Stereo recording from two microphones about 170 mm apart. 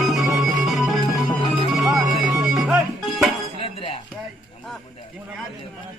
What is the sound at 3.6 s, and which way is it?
Dishes, 35° left (ahead or behind).